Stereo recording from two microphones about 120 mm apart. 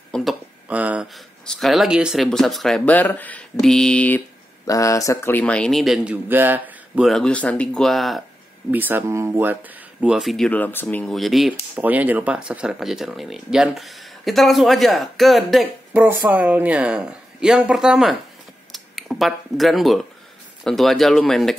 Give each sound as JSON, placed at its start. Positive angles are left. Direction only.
{"t": 0.1, "sound": "a sound", "side_deg": 0}
{"t": 0.7, "sound": "a sound", "side_deg": -10}
{"t": 1.1, "sound": "speech", "side_deg": 5}
{"t": 2.8, "sound": "mantra", "side_deg": 15}
{"t": 4.6, "sound": "speech", "side_deg": 25}
{"t": 5.4, "sound": "speech", "side_deg": 10}
{"t": 6.2, "sound": "speech", "side_deg": -15}
{"t": 7.1, "sound": "speech", "side_deg": 5}
{"t": 8.7, "sound": "speech", "side_deg": -15}
{"t": 11.1, "sound": "speech", "side_deg": 0}
{"t": 11.7, "sound": "speech", "side_deg": -15}
{"t": 15.9, "sound": "speech", "side_deg": -15}